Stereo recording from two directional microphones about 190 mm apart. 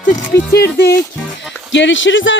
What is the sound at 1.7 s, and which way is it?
Speech, 75° left (ahead or behind).